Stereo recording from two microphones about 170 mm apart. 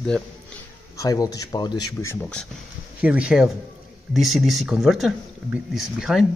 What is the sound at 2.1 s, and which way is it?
Speech, 5° left (ahead or behind).